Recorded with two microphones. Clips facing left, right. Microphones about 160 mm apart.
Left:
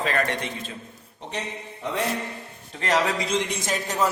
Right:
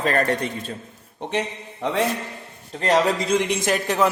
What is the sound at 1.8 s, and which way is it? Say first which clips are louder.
Speech: right 5 dB; 75° right (ahead or behind).